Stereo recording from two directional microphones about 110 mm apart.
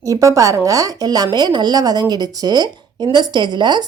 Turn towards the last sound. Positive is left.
turn(degrees=-40)  # may be behind; listen again after turning